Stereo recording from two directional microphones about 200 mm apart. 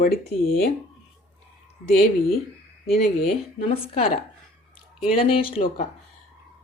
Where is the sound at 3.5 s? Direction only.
30° left (ahead or behind).